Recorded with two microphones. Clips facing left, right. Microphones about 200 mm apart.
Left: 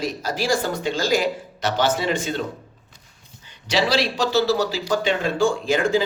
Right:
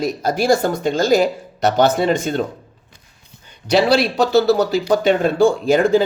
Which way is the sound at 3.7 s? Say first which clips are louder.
Right 6 dB; 55° right (ahead or behind).